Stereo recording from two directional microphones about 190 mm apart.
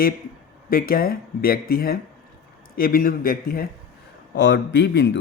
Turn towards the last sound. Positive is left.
turn(degrees=65)  # may be behind; listen again after turning